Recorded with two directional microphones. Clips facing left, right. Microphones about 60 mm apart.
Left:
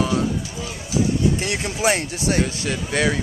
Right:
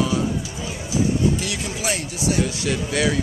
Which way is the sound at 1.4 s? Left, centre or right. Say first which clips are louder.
Left 4 dB; left.